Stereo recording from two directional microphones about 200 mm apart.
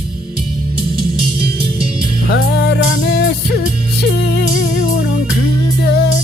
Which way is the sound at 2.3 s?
55° left (ahead or behind).